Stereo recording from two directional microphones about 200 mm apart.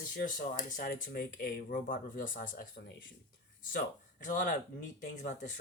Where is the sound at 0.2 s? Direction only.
45° left (ahead or behind).